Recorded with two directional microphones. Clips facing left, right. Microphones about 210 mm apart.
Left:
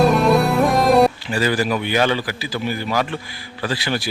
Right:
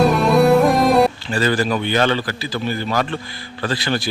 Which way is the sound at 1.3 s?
10° left (ahead or behind).